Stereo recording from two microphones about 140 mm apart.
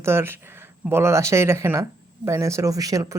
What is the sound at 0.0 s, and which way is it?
Speech, 20° right (ahead or behind).